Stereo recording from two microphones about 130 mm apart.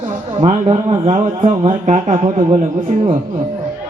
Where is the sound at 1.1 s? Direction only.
70° right (ahead or behind).